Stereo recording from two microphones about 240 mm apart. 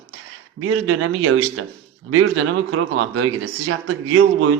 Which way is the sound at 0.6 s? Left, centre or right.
Right.